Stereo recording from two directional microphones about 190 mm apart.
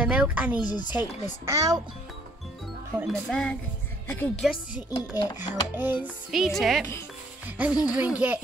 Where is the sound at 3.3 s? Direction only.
5° left (ahead or behind).